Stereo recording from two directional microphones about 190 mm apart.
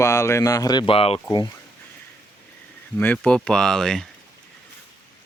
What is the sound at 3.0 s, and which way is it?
Speech, 5° left (ahead or behind).